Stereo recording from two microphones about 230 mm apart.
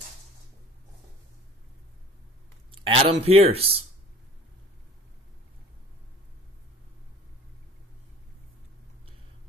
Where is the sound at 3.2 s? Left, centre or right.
Right.